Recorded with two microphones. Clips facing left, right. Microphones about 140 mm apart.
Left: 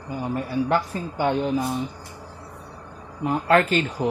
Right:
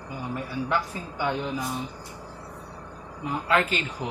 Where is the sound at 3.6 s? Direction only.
45° left (ahead or behind).